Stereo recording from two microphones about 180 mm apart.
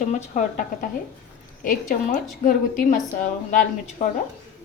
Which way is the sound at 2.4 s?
45° left (ahead or behind).